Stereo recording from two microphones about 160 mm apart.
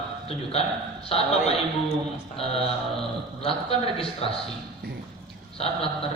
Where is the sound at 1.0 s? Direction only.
40° left (ahead or behind).